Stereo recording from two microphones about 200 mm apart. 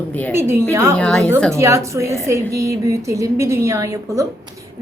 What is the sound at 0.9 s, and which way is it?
Speech, 5° left (ahead or behind).